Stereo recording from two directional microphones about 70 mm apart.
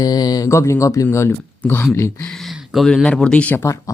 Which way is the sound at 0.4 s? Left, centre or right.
Left.